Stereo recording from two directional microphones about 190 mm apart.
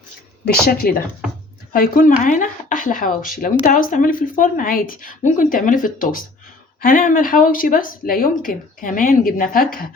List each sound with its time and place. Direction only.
0.4 s speech: 55° left (ahead or behind)